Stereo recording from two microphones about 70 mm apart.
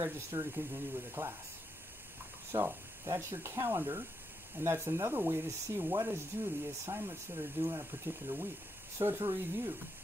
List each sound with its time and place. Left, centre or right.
0.0 s speech: right
2.5 s speech: right